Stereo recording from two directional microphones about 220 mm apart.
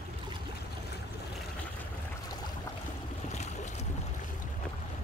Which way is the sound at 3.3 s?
30° left (ahead or behind).